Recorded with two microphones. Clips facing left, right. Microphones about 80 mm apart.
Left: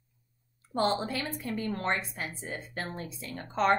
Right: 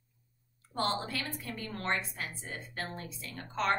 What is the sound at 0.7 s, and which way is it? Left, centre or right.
A woman's voice, centre.